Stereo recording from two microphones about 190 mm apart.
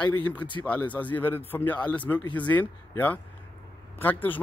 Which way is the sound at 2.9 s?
10° left (ahead or behind).